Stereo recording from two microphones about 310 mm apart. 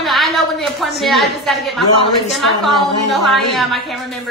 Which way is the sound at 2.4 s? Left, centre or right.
Centre.